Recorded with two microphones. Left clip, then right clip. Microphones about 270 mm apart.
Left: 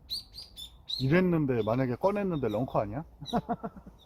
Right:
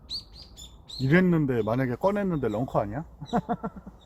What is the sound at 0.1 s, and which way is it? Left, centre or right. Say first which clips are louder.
Chirp: right 1 dB; left.